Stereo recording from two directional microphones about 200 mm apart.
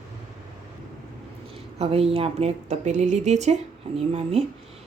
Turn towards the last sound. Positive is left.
turn(degrees=-30)  # may be behind; listen again after turning